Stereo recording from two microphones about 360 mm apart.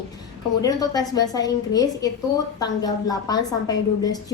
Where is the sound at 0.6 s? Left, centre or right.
Centre.